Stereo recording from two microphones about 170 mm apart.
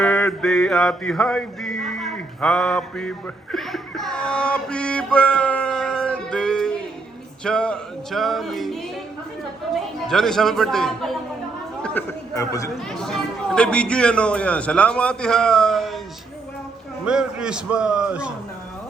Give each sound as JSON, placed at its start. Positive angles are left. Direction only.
{"t": 0.0, "sound": "mantra", "side_deg": 5}
{"t": 7.4, "sound": "speech", "side_deg": 5}
{"t": 12.3, "sound": "speech", "side_deg": 20}
{"t": 12.7, "sound": "speech", "side_deg": 5}
{"t": 17.1, "sound": "speech", "side_deg": -5}